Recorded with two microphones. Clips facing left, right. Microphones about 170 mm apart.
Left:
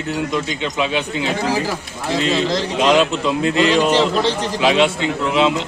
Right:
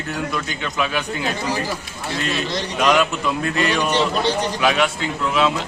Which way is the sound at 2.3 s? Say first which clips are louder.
Left 6 dB; 90° left.